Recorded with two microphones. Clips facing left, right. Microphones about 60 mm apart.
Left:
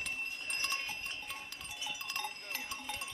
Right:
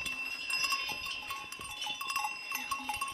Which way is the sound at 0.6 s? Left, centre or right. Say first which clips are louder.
Right 3 dB; left.